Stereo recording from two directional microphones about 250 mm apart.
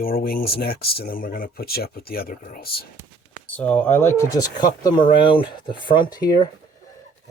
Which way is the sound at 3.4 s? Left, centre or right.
Centre.